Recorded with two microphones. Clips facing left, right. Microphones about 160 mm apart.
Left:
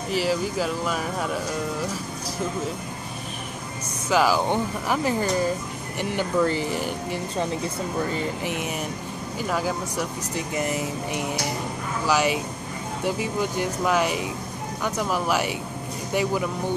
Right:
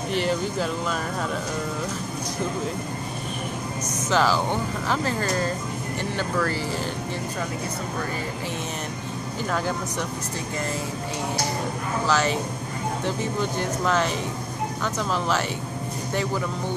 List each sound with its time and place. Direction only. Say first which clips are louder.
0.1 s speech: left 1 dB; 5° left (ahead or behind)
4.1 s speech: left 2 dB; 10° left (ahead or behind)
9.5 s speech: left 1 dB; 5° left (ahead or behind)
10.6 s speech: left 3 dB; 15° left (ahead or behind)